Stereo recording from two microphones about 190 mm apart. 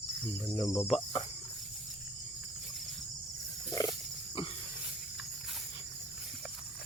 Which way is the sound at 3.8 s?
15° left (ahead or behind).